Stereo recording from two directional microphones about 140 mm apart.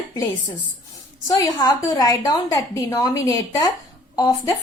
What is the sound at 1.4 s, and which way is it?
A woman's voice, 30° left (ahead or behind).